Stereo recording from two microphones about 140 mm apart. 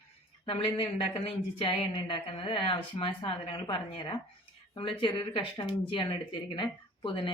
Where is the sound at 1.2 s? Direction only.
40° left (ahead or behind).